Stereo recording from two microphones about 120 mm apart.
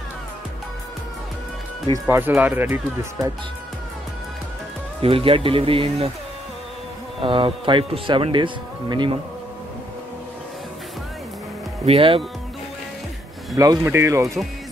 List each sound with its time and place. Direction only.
2.0 s speech: 15° right (ahead or behind)
5.0 s speech: 50° right (ahead or behind)
7.2 s speech: 45° right (ahead or behind)
11.8 s speech: 55° right (ahead or behind)
13.6 s speech: 25° right (ahead or behind)